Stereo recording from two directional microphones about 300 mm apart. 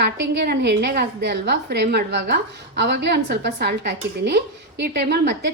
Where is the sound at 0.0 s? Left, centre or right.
Right.